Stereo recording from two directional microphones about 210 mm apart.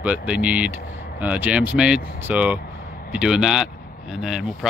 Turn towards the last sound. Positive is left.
turn(degrees=-5)  # may be behind; listen again after turning